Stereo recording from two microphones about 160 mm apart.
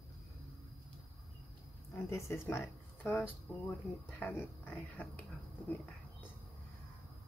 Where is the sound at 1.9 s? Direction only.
15° left (ahead or behind).